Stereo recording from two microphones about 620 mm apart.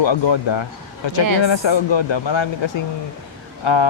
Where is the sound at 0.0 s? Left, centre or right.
Left.